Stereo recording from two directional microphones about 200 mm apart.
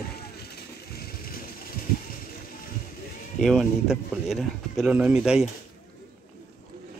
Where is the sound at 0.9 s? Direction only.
50° left (ahead or behind).